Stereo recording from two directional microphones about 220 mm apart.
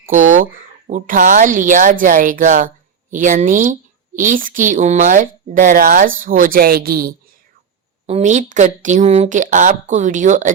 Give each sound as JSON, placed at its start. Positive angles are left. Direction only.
{"t": 0.0, "sound": "a woman's voice", "side_deg": -35}
{"t": 8.0, "sound": "a woman's voice", "side_deg": -30}